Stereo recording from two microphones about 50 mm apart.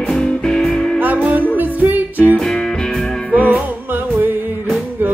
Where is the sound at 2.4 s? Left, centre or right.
Centre.